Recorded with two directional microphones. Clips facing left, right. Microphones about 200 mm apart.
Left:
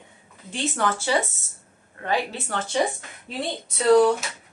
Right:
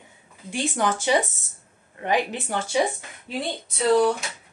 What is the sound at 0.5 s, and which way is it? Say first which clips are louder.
Speech: right 1 dB; 15° right (ahead or behind).